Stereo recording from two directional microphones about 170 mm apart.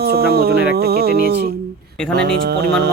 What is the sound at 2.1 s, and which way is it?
Speech, 70° right (ahead or behind).